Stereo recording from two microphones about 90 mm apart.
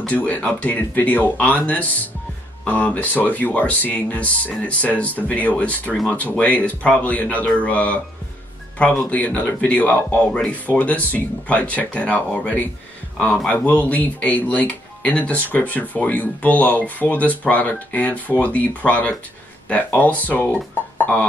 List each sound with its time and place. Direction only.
0.0 s speech: 15° left (ahead or behind)
21.0 s beatboxing: 15° left (ahead or behind)